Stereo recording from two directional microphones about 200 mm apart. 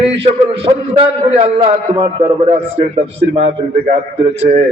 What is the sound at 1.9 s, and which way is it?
A man's voice, 25° right (ahead or behind).